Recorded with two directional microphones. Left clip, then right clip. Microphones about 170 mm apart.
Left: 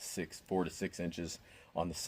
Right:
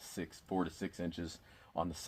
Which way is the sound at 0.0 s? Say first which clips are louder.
Left 3 dB; 65° left (ahead or behind).